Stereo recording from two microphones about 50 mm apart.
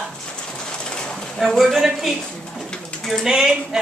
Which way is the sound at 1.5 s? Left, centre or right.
Centre.